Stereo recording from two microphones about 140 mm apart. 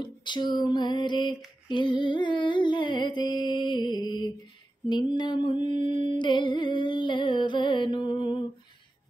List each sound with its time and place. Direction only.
0.0 s female singing: 30° left (ahead or behind)